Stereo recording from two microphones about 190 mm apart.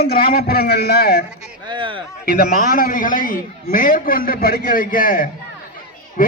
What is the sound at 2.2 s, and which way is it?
A man's voice, 50° left (ahead or behind).